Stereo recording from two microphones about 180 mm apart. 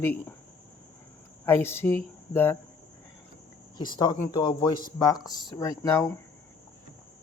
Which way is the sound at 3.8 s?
25° left (ahead or behind).